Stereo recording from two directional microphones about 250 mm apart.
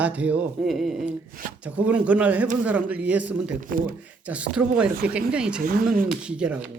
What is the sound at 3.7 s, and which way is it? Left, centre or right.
Speech, right.